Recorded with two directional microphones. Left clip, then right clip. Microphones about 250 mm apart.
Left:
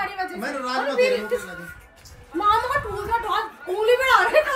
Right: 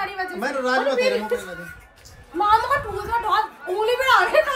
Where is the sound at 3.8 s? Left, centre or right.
Centre.